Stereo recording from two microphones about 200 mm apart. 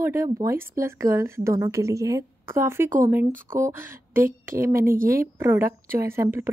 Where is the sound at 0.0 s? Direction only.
15° right (ahead or behind).